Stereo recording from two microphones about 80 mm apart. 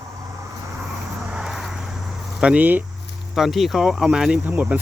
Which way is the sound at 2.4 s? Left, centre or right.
Centre.